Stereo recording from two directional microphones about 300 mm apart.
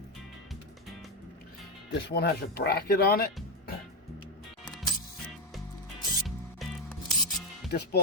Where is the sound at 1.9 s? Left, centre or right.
Left.